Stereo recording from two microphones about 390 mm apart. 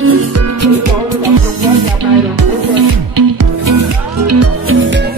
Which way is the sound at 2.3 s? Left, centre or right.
Right.